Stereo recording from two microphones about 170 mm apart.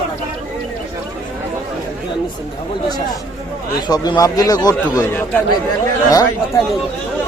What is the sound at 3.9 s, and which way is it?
Speech, 20° left (ahead or behind).